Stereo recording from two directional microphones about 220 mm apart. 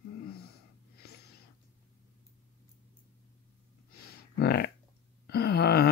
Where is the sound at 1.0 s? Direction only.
45° left (ahead or behind).